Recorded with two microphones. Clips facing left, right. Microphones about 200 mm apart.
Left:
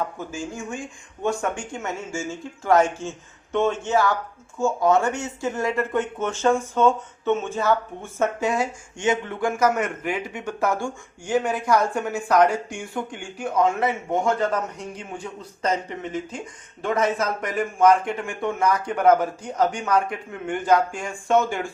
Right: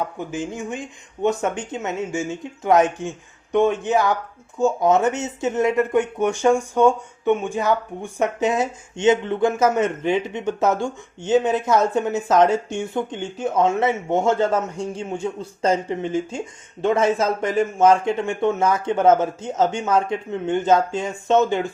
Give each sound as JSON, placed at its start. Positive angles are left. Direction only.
{"t": 0.2, "sound": "speech", "side_deg": -20}